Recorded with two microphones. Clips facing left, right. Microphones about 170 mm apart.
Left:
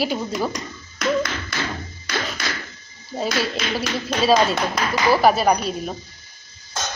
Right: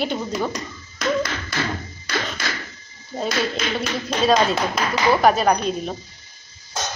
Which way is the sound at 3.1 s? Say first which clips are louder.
Even; 5° left (ahead or behind).